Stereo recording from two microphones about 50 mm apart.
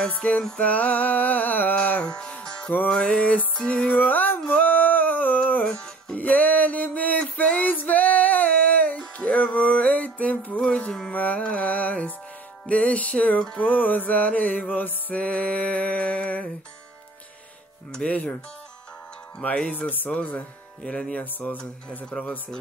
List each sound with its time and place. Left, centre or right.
0.2 s music: left
2.0 s music: centre
3.9 s music: left
4.5 s a sound: left
5.7 s music: centre
6.1 s a sound: left
7.3 s female singing: left
9.2 s music: left
18.0 s music: centre
19.4 s music: left
21.2 s music: left
22.1 s speech: centre